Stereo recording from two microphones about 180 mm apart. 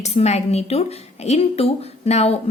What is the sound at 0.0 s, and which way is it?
A woman's voice, 35° left (ahead or behind).